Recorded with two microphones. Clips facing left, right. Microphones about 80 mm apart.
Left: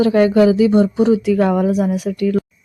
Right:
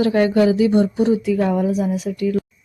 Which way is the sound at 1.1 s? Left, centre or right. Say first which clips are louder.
Left 3 dB; left.